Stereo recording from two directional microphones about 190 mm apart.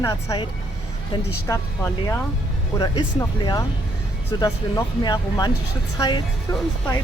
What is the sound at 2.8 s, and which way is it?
Speech, 20° left (ahead or behind).